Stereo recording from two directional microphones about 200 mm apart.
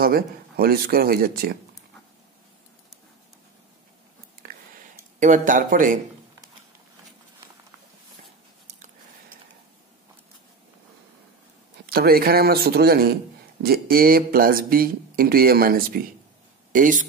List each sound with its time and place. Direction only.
0.0 s speech: 50° right (ahead or behind)
4.4 s a sound: 45° right (ahead or behind)
8.6 s chewing: 35° right (ahead or behind)
11.8 s speech: 50° right (ahead or behind)